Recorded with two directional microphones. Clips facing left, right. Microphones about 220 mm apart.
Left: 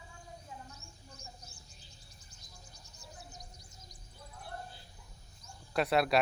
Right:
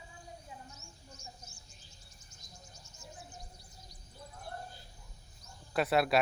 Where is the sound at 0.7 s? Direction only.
35° left (ahead or behind).